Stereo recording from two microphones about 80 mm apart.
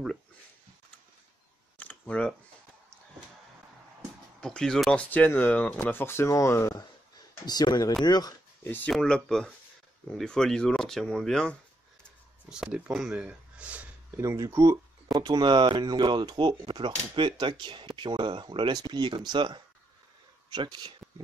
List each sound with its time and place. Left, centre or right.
1.8 s computer keyboard: centre
4.4 s speech: centre
4.9 s speech: left
6.7 s speech: left
8.6 s speech: left
8.9 s speech: centre
12.4 s speech: centre
14.1 s speech: right
15.2 s speech: right